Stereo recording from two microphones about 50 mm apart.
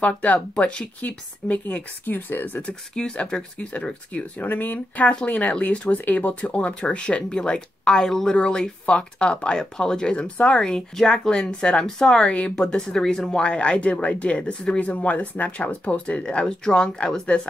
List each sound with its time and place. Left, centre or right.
0.0 s speech: left
2.0 s speech: left
2.6 s speech: centre
4.5 s speech: left; by 13.3 s centre
13.3 s speech: left